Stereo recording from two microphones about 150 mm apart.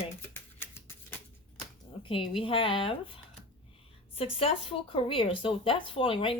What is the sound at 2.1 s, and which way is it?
Speech, 35° left (ahead or behind).